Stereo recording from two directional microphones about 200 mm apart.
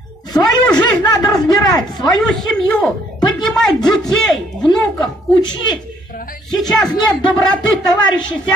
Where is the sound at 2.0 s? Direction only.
Centre (ahead or behind).